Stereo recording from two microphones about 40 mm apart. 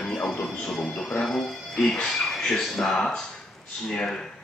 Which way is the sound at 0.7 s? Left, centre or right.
Centre.